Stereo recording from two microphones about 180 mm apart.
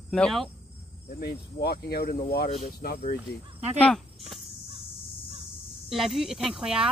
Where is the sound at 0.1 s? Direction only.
5° left (ahead or behind).